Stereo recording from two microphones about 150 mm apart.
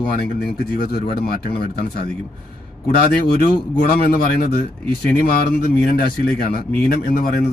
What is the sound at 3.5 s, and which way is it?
Speech, 85° left.